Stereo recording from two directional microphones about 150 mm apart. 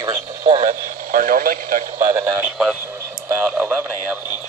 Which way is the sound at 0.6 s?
65° right (ahead or behind).